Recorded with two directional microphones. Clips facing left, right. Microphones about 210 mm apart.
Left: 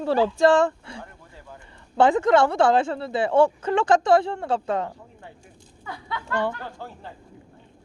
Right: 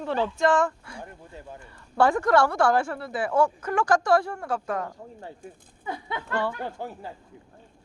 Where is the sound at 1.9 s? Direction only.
20° left (ahead or behind).